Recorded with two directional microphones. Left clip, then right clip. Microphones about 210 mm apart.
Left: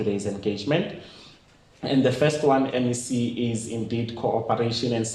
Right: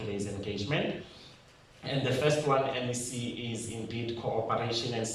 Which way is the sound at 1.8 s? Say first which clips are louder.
Left 7 dB; 45° left (ahead or behind).